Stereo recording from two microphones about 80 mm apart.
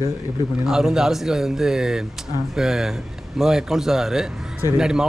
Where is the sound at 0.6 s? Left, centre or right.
Centre.